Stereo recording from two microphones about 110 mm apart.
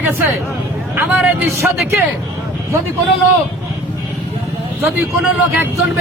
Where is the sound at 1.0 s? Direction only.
15° right (ahead or behind).